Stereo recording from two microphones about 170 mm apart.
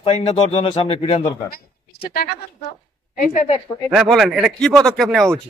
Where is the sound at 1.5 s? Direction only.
60° left (ahead or behind).